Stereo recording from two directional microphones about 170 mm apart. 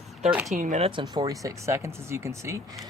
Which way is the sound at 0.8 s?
30° right (ahead or behind).